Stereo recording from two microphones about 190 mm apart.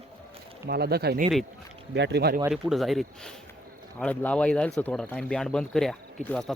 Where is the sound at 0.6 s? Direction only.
55° right (ahead or behind).